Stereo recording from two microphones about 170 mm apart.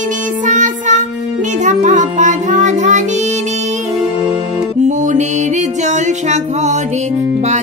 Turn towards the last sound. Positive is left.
turn(degrees=-45)  # may be behind; listen again after turning